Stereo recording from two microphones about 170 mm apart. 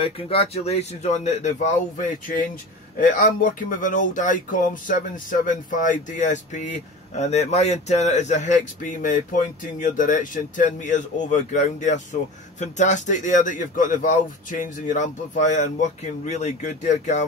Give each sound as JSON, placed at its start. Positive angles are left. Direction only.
{"t": 0.0, "sound": "speech", "side_deg": 35}